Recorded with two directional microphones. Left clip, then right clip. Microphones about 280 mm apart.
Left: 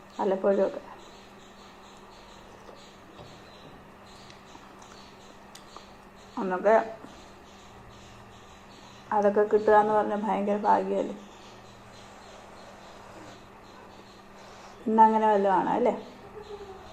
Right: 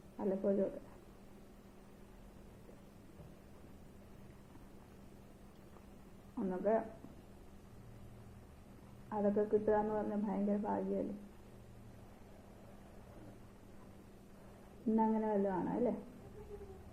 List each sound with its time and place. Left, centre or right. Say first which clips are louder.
0.2 s a woman's voice: left 12 dB; left
6.3 s speech: left 13 dB; left
9.0 s a woman's voice: left 12 dB; left
14.9 s a woman's voice: left 16 dB; left